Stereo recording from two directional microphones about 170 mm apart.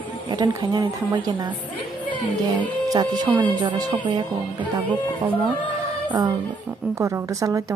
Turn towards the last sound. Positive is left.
turn(degrees=-15)  # may be behind; listen again after turning